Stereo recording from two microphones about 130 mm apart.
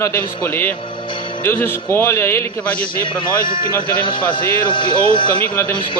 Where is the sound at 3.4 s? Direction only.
35° left (ahead or behind).